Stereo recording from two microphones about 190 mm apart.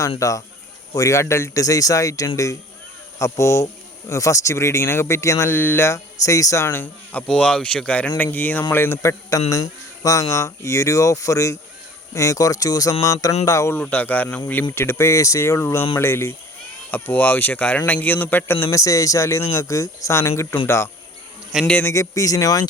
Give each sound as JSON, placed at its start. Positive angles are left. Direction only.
{"t": 0.2, "sound": "speech", "side_deg": 15}